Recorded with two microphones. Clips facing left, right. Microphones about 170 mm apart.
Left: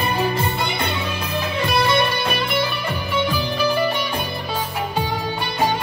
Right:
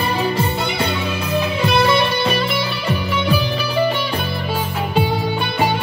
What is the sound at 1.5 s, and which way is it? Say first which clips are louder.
Music: right 2 dB; 50° left (ahead or behind).